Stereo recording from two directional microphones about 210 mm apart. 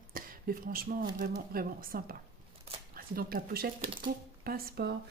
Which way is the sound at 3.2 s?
45° right (ahead or behind).